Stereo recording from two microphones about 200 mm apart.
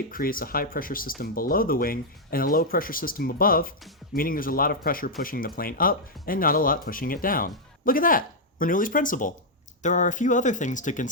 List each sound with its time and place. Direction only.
0.1 s speech: 45° left (ahead or behind)